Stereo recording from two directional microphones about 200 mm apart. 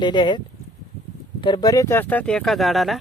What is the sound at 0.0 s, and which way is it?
Speech, 20° left (ahead or behind).